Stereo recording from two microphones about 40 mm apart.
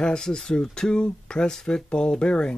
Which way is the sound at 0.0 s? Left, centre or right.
Centre.